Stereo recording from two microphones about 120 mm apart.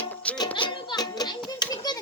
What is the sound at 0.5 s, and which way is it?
Music, 40° left (ahead or behind).